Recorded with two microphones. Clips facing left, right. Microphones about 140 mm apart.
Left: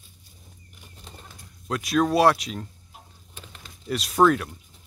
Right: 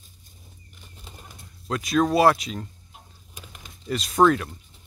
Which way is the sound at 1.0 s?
5° right (ahead or behind).